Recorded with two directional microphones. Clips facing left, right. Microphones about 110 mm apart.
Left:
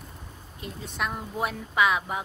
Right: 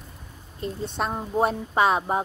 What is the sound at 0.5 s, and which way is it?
Speech, 35° right (ahead or behind).